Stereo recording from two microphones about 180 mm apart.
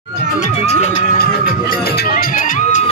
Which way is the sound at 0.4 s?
40° left (ahead or behind).